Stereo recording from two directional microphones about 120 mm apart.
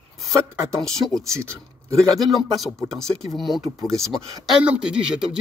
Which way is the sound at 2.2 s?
Centre (ahead or behind).